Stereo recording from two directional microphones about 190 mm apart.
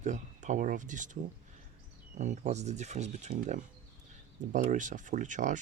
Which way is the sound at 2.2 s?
40° right (ahead or behind).